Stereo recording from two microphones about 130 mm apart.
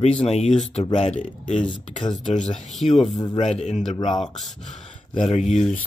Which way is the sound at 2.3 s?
65° left (ahead or behind).